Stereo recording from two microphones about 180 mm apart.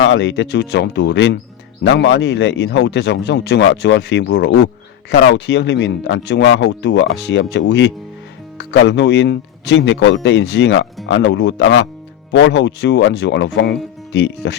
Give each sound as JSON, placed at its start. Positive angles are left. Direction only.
{"t": 0.1, "sound": "speech", "side_deg": 75}